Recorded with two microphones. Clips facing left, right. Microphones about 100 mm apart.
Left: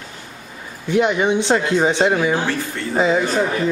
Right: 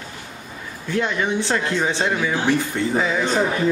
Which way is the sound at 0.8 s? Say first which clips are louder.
Left 6 dB; 20° left (ahead or behind).